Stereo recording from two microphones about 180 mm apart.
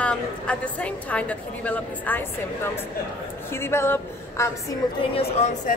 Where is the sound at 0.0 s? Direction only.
5° left (ahead or behind).